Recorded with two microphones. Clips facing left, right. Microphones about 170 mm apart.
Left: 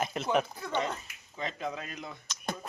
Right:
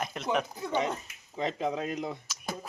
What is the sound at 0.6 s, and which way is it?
Speech, 10° right (ahead or behind).